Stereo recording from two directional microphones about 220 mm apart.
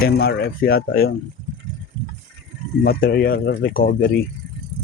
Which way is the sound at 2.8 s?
45° left (ahead or behind).